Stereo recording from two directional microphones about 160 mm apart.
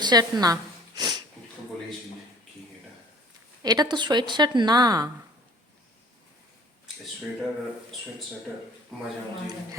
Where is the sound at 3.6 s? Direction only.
25° right (ahead or behind).